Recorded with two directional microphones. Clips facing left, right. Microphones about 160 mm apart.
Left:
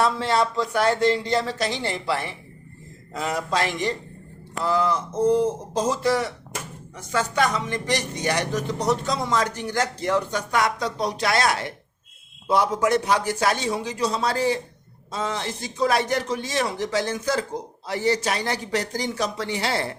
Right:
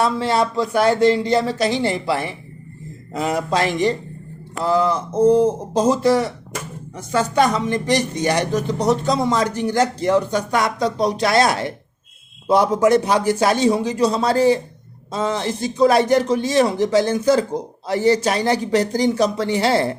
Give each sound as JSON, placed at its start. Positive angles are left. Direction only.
{"t": 0.0, "sound": "speech", "side_deg": -5}
{"t": 3.7, "sound": "speech", "side_deg": -30}